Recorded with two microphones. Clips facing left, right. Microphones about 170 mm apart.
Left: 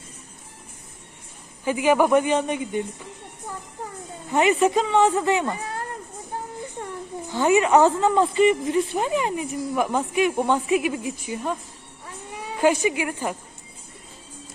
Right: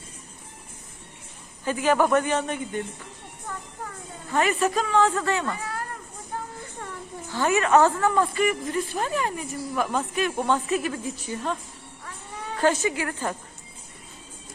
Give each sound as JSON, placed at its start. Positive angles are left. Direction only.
{"t": 1.6, "sound": "a woman's voice", "side_deg": 15}
{"t": 4.3, "sound": "speech", "side_deg": 20}
{"t": 6.3, "sound": "music", "side_deg": 20}
{"t": 7.3, "sound": "a woman's voice", "side_deg": 15}
{"t": 12.0, "sound": "cat", "side_deg": 10}